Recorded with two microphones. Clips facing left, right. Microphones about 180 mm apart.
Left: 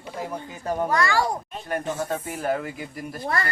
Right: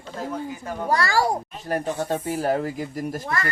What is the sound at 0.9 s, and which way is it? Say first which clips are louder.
Speech: right 4 dB; 35° right (ahead or behind).